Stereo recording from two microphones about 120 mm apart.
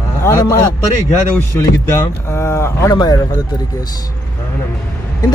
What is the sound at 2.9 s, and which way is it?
Speech, 35° left (ahead or behind).